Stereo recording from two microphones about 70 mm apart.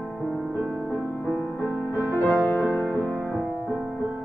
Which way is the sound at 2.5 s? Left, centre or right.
Left.